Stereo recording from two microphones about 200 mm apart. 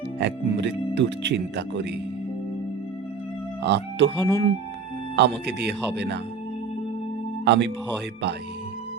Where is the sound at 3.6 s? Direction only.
60° right (ahead or behind).